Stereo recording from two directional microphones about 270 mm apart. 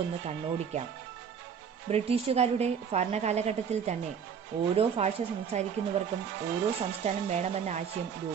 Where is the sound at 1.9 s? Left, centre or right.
Right.